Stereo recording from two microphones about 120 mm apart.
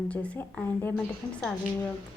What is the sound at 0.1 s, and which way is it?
Speech, 10° left (ahead or behind).